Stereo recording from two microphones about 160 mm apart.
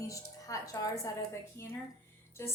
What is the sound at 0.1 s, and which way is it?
A woman's voice, 20° left (ahead or behind).